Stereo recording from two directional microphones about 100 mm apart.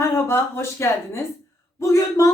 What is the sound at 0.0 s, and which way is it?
Speech, 30° left (ahead or behind).